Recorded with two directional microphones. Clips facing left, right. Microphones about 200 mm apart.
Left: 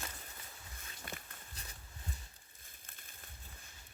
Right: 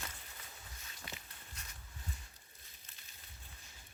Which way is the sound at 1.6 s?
35° left (ahead or behind).